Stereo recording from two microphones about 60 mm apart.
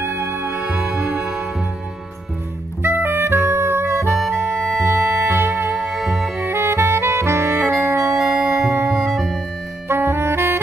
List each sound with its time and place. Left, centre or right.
0.0 s music: right
0.5 s music: right
0.7 s music: centre
2.8 s music: right
5.8 s music: centre
6.4 s saxophone: right
7.7 s music: right
9.1 s music: centre
9.8 s saxophone: right